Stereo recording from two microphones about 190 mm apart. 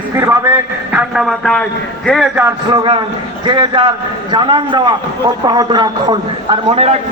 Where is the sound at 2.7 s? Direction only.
25° right (ahead or behind).